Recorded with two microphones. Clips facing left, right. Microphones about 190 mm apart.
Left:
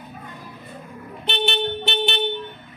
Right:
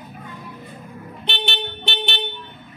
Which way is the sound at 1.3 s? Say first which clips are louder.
Left 6 dB; centre (ahead or behind).